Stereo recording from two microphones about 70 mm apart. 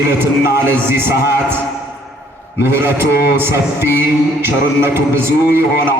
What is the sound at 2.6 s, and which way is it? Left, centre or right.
A man's voice, right.